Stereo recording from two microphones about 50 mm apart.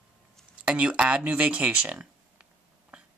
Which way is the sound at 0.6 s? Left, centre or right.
Right.